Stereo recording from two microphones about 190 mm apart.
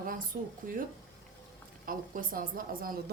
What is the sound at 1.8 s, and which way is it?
Speech, 50° right (ahead or behind).